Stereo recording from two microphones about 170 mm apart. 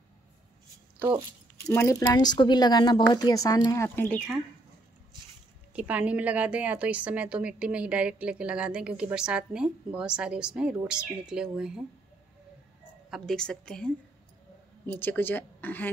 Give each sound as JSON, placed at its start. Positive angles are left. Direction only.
{"t": 1.7, "sound": "a woman's voice", "side_deg": 15}
{"t": 5.7, "sound": "a woman's voice", "side_deg": -10}
{"t": 13.1, "sound": "a woman's voice", "side_deg": 0}